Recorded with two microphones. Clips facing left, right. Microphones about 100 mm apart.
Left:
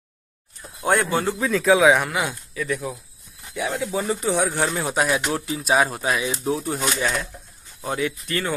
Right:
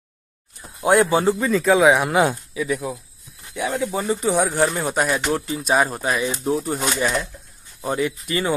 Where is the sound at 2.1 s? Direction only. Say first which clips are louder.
Right 8 dB; 40° right (ahead or behind).